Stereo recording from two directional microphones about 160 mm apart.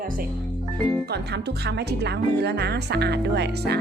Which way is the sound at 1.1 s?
90° right.